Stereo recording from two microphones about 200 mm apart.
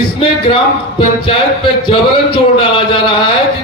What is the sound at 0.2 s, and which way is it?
Speech, 25° left (ahead or behind).